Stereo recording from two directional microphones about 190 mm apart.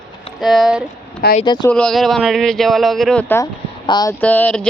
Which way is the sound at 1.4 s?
20° left (ahead or behind).